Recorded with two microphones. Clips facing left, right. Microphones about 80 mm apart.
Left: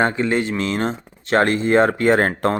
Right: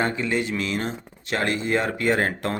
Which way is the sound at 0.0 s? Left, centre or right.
Left.